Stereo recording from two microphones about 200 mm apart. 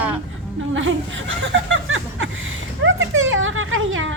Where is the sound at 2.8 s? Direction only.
75° right (ahead or behind).